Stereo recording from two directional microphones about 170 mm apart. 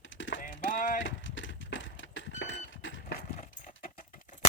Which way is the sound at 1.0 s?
90° left.